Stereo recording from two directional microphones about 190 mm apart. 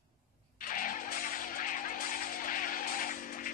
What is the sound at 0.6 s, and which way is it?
Music, 45° left (ahead or behind).